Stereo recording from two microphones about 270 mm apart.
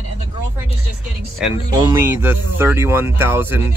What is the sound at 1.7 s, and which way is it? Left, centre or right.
Speech, centre.